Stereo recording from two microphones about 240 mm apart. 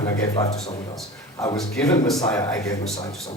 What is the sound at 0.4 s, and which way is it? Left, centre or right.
Speech, left.